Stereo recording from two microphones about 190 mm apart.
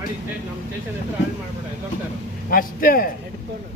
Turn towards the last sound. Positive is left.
turn(degrees=50)  # may be behind; listen again after turning